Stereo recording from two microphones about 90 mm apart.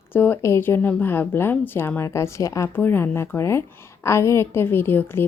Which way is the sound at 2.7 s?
25° left (ahead or behind).